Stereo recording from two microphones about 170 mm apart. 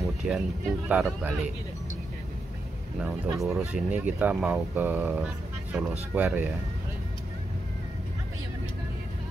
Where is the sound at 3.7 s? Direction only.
10° right (ahead or behind).